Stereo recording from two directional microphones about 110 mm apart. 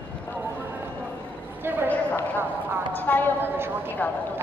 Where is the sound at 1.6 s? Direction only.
20° right (ahead or behind).